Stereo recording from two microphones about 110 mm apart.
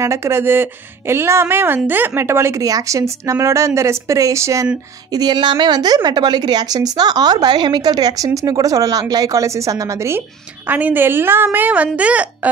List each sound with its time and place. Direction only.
0.0 s speech: 25° right (ahead or behind)
5.1 s a woman's voice: 40° right (ahead or behind); by 12.4 s 10° right (ahead or behind)